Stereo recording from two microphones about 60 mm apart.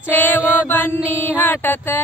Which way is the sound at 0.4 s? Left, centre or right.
Right.